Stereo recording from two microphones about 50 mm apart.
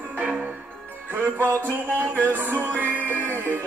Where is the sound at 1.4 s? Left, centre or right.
Right.